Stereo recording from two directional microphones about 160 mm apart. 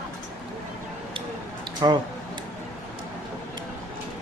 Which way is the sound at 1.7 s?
30° right (ahead or behind).